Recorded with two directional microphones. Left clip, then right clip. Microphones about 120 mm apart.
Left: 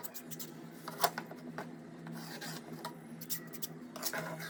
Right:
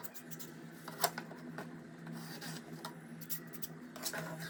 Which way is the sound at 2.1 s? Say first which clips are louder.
Left 2 dB; 5° right (ahead or behind).